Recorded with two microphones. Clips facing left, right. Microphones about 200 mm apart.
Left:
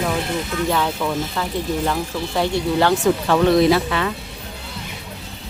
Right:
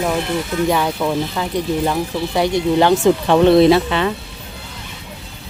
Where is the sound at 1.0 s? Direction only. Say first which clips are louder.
Right 3 dB; 15° right (ahead or behind).